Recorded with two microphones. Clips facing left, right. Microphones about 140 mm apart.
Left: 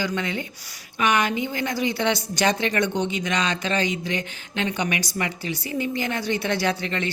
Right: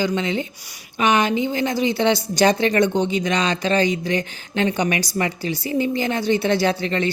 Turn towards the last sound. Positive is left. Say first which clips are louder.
# right 5 dB
turn(degrees=-35)  # may be behind; listen again after turning